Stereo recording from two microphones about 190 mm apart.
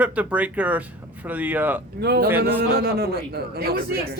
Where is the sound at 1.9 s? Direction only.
60° right (ahead or behind).